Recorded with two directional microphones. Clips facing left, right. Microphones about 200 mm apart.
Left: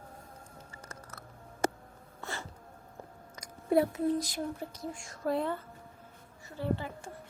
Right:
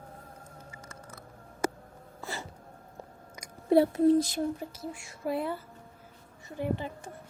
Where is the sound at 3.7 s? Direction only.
30° right (ahead or behind).